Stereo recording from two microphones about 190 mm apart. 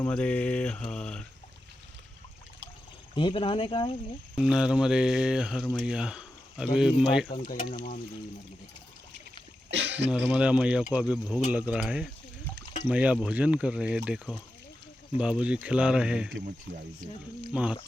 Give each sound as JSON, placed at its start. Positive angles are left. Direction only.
{"t": 0.0, "sound": "speech", "side_deg": 5}
{"t": 3.2, "sound": "speech", "side_deg": 25}
{"t": 4.4, "sound": "speech", "side_deg": -5}
{"t": 7.4, "sound": "speech", "side_deg": 45}
{"t": 9.6, "sound": "a sound", "side_deg": -65}
{"t": 10.1, "sound": "speech", "side_deg": -5}
{"t": 17.5, "sound": "speech", "side_deg": -5}